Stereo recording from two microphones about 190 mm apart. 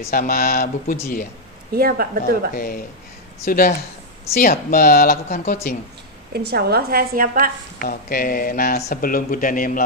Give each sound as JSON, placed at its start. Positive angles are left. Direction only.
{"t": 0.1, "sound": "speech", "side_deg": 50}
{"t": 1.8, "sound": "a woman's voice", "side_deg": -50}
{"t": 2.5, "sound": "speech", "side_deg": 50}
{"t": 6.3, "sound": "a woman's voice", "side_deg": -55}
{"t": 7.8, "sound": "speech", "side_deg": 50}